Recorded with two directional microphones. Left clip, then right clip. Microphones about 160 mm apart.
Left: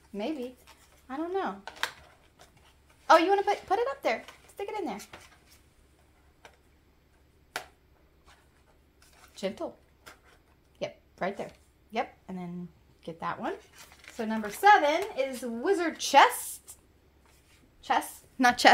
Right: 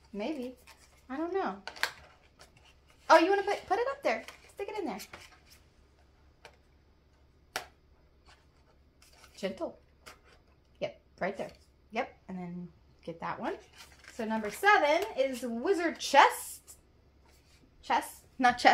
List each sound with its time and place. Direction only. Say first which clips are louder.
1.0 s speech: left 1 dB; 40° left (ahead or behind)
1.6 s a sound: even; 5° right (ahead or behind)
3.1 s speech: left 2 dB; 40° left (ahead or behind)
9.3 s speech: left 2 dB; 45° left (ahead or behind)
10.8 s speech: left 1 dB; 45° left (ahead or behind)
14.1 s speech: left 1 dB; 55° left (ahead or behind)
17.8 s a woman's voice: left 2 dB; 50° left (ahead or behind)
18.4 s a woman's voice: left 3 dB; 90° left